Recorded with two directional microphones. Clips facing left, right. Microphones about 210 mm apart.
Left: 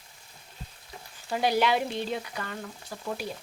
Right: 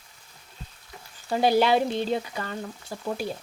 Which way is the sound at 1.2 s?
30° right (ahead or behind).